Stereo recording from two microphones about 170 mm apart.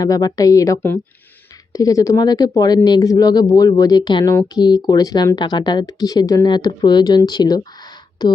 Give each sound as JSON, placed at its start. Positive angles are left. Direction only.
{"t": 0.0, "sound": "speech", "side_deg": 20}